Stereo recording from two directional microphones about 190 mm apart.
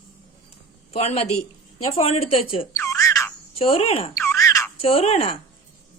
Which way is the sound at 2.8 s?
15° left (ahead or behind).